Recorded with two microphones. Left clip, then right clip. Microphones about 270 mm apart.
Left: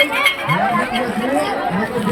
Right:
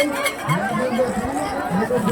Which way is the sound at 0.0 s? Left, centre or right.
Centre.